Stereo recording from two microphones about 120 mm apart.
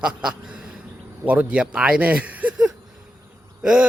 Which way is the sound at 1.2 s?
10° right (ahead or behind).